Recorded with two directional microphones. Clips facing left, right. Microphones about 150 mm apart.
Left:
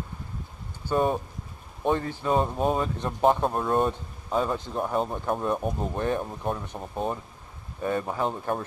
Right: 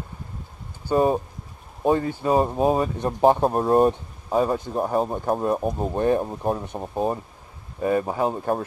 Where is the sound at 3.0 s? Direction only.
40° right (ahead or behind).